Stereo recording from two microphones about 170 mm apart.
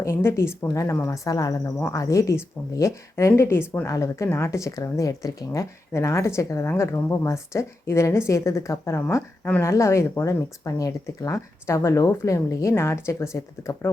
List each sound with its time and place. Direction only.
0.0 s speech: 15° left (ahead or behind)